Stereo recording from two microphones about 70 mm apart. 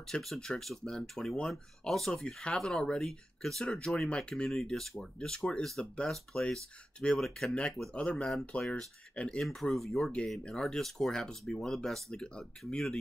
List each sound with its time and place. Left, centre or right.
0.1 s speech: centre